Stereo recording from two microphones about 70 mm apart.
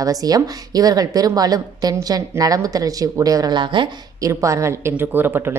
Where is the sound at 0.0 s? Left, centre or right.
Right.